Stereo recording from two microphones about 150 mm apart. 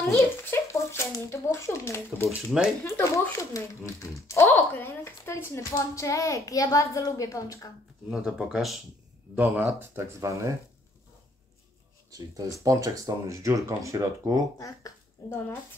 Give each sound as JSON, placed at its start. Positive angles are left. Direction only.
{"t": 0.0, "sound": "a child's voice", "side_deg": 15}
{"t": 8.1, "sound": "speech", "side_deg": -5}
{"t": 12.6, "sound": "speech", "side_deg": -20}
{"t": 14.6, "sound": "speech", "side_deg": 20}